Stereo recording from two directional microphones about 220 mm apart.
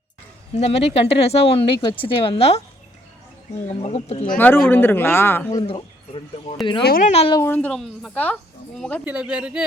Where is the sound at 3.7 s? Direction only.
25° left (ahead or behind).